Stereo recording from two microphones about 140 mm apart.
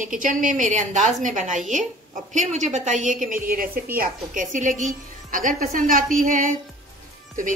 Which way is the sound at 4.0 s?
70° right (ahead or behind).